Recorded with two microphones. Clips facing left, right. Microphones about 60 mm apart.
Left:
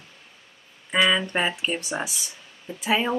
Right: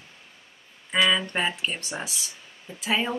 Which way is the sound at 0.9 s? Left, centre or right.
Centre.